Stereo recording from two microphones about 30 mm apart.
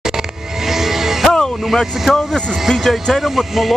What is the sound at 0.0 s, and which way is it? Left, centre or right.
Music, centre.